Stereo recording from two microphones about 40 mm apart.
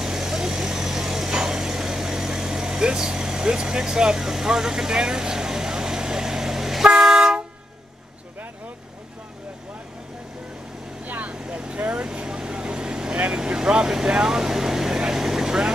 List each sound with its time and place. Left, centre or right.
0.0 s vehicle: centre
11.1 s vehicle: right
11.3 s vehicle: right
13.1 s vehicle: right
13.4 s vehicle: centre